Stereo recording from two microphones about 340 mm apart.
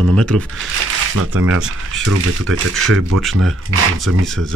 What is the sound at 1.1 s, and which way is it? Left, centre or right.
Speech, right.